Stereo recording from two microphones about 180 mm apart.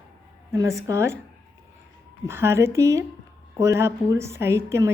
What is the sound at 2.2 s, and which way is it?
A woman's voice, 15° right (ahead or behind).